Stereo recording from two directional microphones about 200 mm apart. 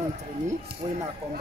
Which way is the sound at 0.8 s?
20° right (ahead or behind).